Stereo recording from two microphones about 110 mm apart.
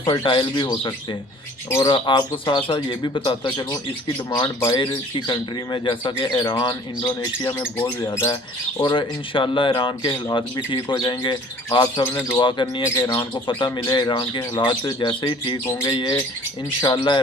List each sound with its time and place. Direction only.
0.0 s speech: 45° left (ahead or behind)
7.4 s speech: 20° left (ahead or behind)
8.8 s speech: 45° left (ahead or behind)
12.4 s speech: 50° left (ahead or behind)